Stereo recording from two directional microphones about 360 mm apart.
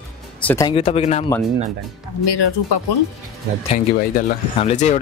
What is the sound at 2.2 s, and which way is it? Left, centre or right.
Speech, left.